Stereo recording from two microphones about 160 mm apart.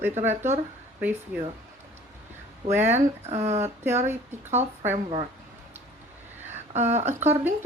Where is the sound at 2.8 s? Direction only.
45° right (ahead or behind).